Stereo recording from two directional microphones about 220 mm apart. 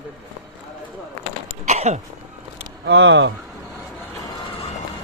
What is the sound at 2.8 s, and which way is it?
Speech, 55° right (ahead or behind).